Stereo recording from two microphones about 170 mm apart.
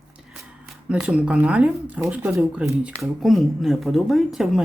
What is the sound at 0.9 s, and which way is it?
Speech, 5° right (ahead or behind).